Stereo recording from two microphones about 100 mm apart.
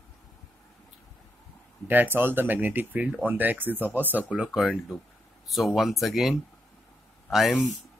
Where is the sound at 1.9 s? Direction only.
20° right (ahead or behind).